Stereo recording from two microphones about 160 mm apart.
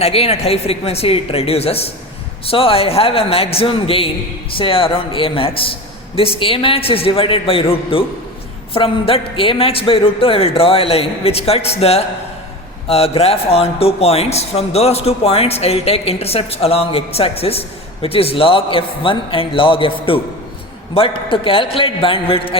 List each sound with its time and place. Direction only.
0.0 s speech: 40° left (ahead or behind)